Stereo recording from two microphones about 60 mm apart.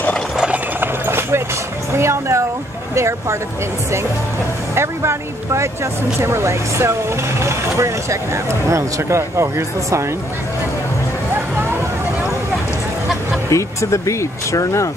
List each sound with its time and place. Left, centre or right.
0.7 s a sound: right
2.0 s speech: right
4.7 s speech: right
13.5 s speech: left